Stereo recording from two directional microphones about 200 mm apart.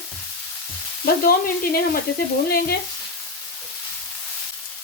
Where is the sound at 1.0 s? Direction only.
45° left (ahead or behind).